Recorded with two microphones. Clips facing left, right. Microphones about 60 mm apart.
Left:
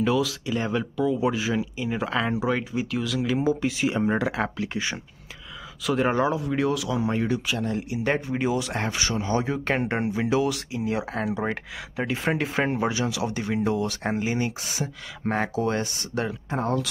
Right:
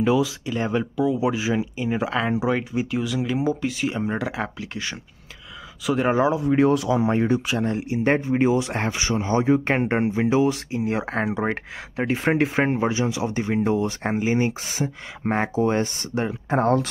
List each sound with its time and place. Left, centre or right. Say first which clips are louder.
0.0 s speech: right 3 dB; centre
0.5 s speech: right 2 dB; centre
3.4 s speech: even; centre
5.9 s speech: right 3 dB; centre
6.4 s speech: right 6 dB; right
12.8 s speech: right 3 dB; right
16.4 s speech: right 9 dB; right